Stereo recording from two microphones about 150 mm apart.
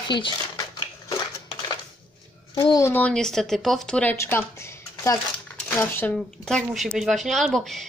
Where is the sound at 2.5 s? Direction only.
35° left (ahead or behind).